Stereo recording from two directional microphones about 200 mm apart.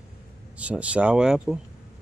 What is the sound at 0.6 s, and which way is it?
Speech, 5° right (ahead or behind).